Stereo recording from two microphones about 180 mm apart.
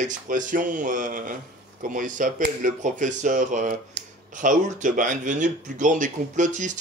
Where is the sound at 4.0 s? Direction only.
70° right (ahead or behind).